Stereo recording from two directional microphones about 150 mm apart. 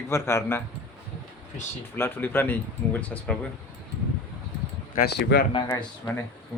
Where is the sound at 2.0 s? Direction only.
15° left (ahead or behind).